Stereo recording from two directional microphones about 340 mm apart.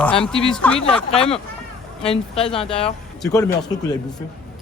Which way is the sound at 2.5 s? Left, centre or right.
Centre.